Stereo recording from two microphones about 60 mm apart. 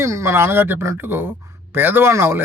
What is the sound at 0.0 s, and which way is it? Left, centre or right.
Speech, right.